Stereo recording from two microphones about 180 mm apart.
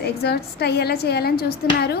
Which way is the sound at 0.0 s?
65° left (ahead or behind).